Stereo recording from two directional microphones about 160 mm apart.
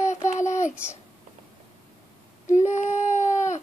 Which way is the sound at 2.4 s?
50° left (ahead or behind).